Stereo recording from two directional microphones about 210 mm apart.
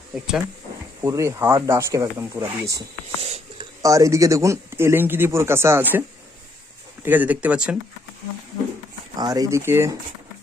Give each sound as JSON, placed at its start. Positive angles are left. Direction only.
{"t": 0.1, "sound": "speech", "side_deg": 0}
{"t": 1.0, "sound": "speech", "side_deg": -15}
{"t": 3.2, "sound": "a sound", "side_deg": -30}
{"t": 3.8, "sound": "speech", "side_deg": -15}
{"t": 7.0, "sound": "speech", "side_deg": -10}
{"t": 9.1, "sound": "speech", "side_deg": -15}